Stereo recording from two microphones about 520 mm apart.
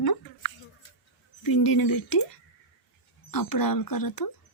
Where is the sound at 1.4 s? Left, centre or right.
Left.